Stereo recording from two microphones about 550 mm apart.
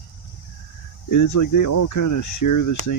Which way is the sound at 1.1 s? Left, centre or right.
Left.